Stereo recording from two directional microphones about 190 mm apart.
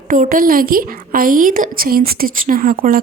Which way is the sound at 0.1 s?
45° right (ahead or behind).